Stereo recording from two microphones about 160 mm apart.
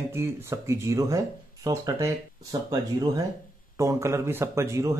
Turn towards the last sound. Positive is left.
turn(degrees=-20)  # may be behind; listen again after turning